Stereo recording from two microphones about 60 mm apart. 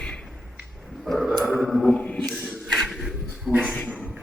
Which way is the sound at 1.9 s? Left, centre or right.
Centre.